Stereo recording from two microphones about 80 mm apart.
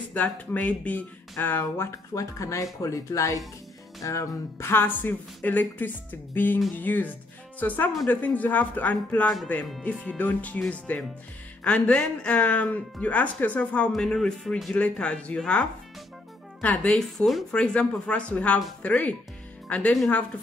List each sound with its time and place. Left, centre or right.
0.1 s speech: centre
2.1 s speech: left; by 15.6 s centre
16.6 s speech: centre
17.0 s speech: centre
17.5 s speech: centre